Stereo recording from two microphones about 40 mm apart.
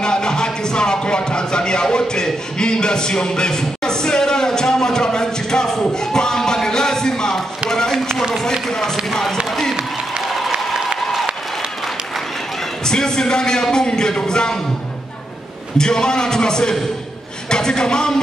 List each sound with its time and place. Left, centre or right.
0.0 s speech: centre
7.7 s a sound: centre
8.6 s a man's voice: centre
9.1 s a sound: centre
10.2 s applause: centre
12.8 s a man's voice: centre
15.8 s a man's voice: centre